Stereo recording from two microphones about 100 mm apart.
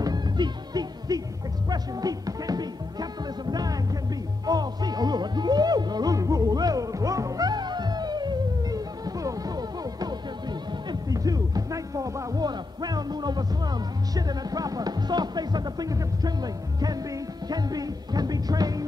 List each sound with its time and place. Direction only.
0.0 s music: 40° right (ahead or behind)